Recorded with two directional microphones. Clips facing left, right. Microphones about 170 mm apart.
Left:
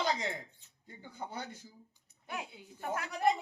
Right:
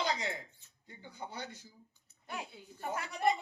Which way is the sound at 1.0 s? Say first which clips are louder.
Left 2 dB; 50° left (ahead or behind).